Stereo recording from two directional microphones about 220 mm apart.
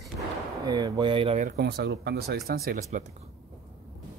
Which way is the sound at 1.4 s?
45° right (ahead or behind).